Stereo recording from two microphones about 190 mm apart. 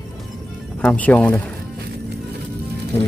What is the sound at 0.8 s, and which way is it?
Speech, 5° left (ahead or behind).